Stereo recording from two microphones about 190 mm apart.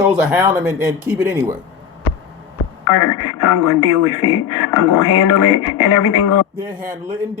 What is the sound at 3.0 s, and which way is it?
Speech, 20° left (ahead or behind).